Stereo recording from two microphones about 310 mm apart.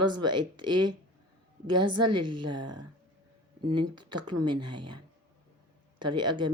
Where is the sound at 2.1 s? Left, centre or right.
Centre.